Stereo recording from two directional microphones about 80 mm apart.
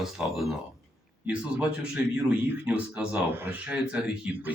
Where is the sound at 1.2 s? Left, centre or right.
Centre.